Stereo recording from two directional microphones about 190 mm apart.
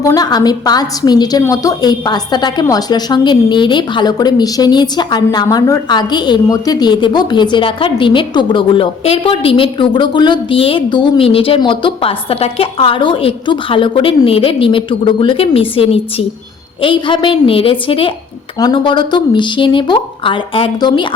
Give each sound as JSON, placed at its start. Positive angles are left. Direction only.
{"t": 0.0, "sound": "a woman's voice", "side_deg": 20}